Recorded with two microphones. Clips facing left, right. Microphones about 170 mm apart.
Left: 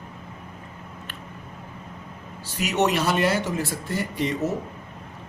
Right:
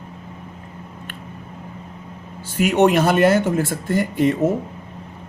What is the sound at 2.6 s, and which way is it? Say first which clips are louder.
A man's voice: right 7 dB; 55° right (ahead or behind).